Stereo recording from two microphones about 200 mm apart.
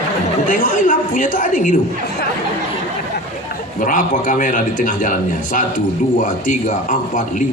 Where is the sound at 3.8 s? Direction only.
40° left (ahead or behind).